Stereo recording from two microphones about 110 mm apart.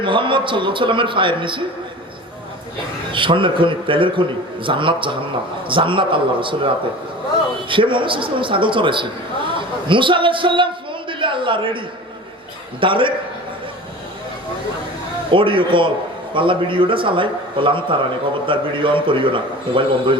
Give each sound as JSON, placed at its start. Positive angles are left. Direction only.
{"t": 0.0, "sound": "a man's voice", "side_deg": -50}
{"t": 3.1, "sound": "a man's voice", "side_deg": -50}
{"t": 7.7, "sound": "a man's voice", "side_deg": -50}
{"t": 12.8, "sound": "a man's voice", "side_deg": -50}
{"t": 15.3, "sound": "a man's voice", "side_deg": -50}